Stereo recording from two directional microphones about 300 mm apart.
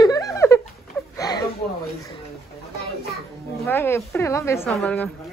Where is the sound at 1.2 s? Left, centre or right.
Centre.